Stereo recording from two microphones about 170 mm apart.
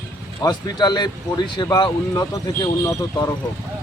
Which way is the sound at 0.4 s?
25° left (ahead or behind).